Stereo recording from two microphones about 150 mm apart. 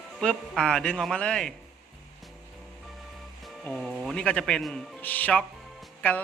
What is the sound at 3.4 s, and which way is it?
Music, centre (ahead or behind).